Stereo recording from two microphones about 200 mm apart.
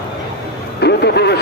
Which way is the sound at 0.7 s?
55° left (ahead or behind).